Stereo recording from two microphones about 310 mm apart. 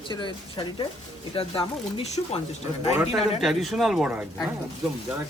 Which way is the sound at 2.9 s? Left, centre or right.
Centre.